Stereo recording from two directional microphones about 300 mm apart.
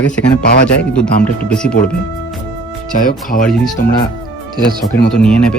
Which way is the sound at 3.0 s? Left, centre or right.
Left.